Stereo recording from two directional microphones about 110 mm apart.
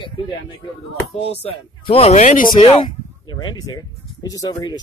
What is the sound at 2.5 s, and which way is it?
Speech, 50° left (ahead or behind).